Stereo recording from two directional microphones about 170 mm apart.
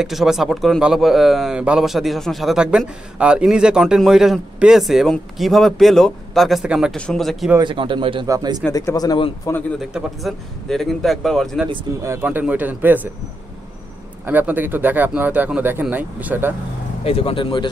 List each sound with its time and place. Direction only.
0.0 s a man's voice: centre (ahead or behind)
7.5 s a man's voice: 30° right (ahead or behind)
8.7 s speech: 20° left (ahead or behind)
9.8 s a man's voice: centre (ahead or behind)
12.0 s speech: 15° right (ahead or behind)
14.2 s speech: 10° right (ahead or behind)
17.0 s speech: 35° left (ahead or behind)